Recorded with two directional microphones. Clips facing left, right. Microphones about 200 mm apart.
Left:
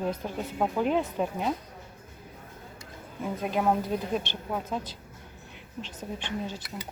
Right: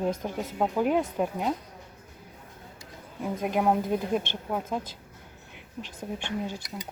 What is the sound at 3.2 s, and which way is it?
Speech, 10° right (ahead or behind).